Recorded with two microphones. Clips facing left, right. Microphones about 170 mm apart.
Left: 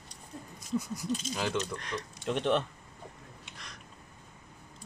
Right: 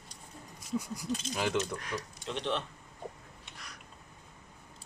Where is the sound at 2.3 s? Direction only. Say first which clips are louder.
Left 6 dB; 55° left (ahead or behind).